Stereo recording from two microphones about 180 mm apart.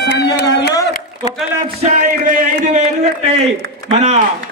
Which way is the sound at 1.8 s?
45° right (ahead or behind).